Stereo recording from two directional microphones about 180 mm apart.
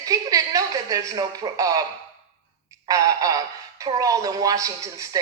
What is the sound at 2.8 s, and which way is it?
Speech, 20° right (ahead or behind).